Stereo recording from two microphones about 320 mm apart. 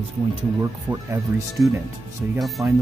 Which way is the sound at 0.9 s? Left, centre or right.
Centre.